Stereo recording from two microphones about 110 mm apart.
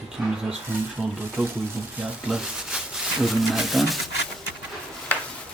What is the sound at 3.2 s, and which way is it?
Speech, centre (ahead or behind).